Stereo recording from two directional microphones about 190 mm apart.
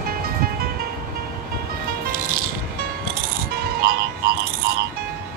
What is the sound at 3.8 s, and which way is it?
Music, 55° right (ahead or behind).